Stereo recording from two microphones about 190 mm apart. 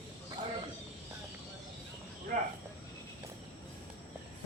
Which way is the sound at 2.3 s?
45° right (ahead or behind).